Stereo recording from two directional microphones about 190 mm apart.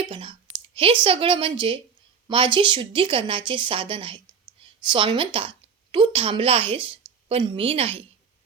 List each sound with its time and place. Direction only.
0.0 s clicking: 25° right (ahead or behind)
2.2 s a woman's voice: 25° right (ahead or behind)